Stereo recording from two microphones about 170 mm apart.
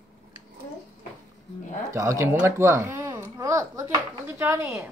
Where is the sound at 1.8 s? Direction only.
15° right (ahead or behind).